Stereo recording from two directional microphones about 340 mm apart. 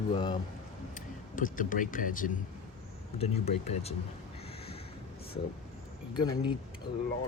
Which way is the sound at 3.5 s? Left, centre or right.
Left.